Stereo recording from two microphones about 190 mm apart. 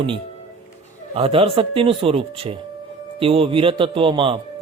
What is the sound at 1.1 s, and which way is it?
A man's voice, 30° right (ahead or behind).